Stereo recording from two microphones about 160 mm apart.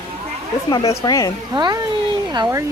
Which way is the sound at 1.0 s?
20° left (ahead or behind).